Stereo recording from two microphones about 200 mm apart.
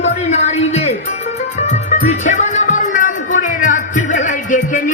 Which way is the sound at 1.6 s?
35° left (ahead or behind).